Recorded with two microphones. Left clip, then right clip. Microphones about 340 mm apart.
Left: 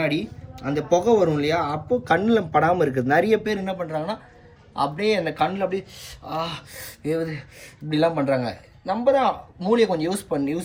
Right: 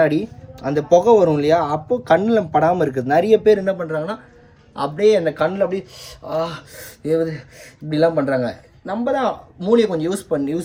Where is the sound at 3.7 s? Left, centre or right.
Right.